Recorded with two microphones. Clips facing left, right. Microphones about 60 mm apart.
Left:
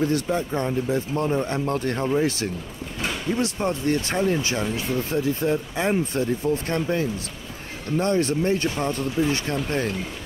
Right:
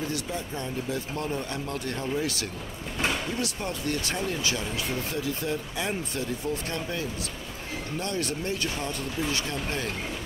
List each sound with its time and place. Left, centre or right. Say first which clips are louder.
0.1 s speech: left 9 dB; left
0.8 s speech: left 7 dB; left